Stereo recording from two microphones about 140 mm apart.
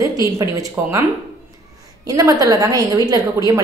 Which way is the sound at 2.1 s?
25° right (ahead or behind).